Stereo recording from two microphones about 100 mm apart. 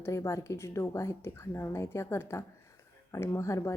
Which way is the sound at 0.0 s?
30° left (ahead or behind).